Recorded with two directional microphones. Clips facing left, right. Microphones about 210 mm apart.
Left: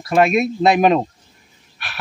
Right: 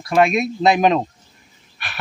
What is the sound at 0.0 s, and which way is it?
Speech, centre (ahead or behind).